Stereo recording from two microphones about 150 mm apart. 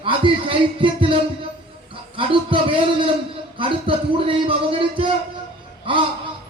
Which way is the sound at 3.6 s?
35° right (ahead or behind).